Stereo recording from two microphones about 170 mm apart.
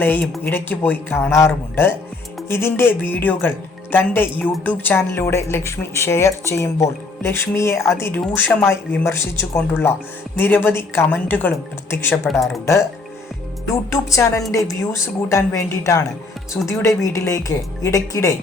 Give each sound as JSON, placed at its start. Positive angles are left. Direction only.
{"t": 0.0, "sound": "speech", "side_deg": 10}
{"t": 13.9, "sound": "speech", "side_deg": 15}